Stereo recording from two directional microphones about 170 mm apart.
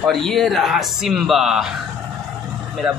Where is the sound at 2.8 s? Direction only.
5° right (ahead or behind).